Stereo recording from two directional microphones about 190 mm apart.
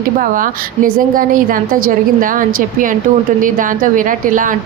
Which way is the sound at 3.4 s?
45° right (ahead or behind).